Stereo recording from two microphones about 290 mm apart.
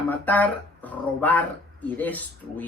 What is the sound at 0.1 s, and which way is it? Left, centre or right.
Speech, centre.